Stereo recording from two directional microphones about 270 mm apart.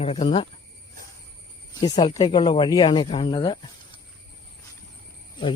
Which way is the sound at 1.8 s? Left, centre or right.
Centre.